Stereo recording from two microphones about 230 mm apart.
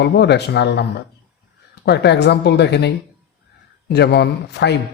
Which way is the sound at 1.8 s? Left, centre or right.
Left.